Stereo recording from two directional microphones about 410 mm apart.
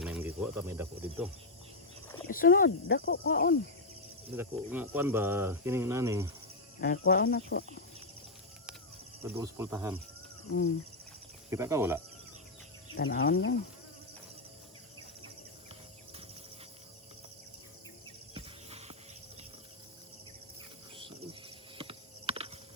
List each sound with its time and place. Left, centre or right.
0.0 s speech: centre
2.2 s speech: left
4.4 s speech: centre
6.7 s speech: left
9.2 s speech: centre
11.5 s speech: centre
12.9 s speech: left
18.3 s a sound: centre
21.8 s clip-clop: centre